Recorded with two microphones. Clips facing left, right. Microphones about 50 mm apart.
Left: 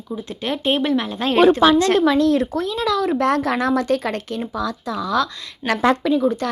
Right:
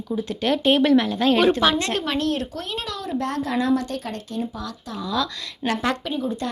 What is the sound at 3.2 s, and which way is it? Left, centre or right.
Speech, left.